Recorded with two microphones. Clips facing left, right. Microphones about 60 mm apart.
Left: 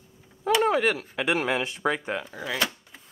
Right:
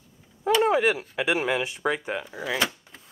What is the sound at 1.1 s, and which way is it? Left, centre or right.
Speech, centre.